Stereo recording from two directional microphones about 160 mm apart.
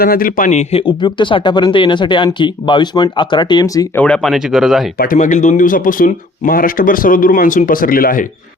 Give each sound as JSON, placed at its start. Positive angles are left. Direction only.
{"t": 0.0, "sound": "speech", "side_deg": 65}
{"t": 3.9, "sound": "speech", "side_deg": 5}
{"t": 5.1, "sound": "speech", "side_deg": 50}